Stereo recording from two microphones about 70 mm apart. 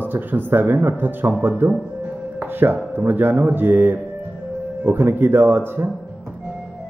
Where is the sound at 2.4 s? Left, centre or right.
Right.